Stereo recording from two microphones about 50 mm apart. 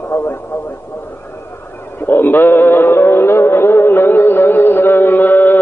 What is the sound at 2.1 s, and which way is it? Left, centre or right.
Music, left.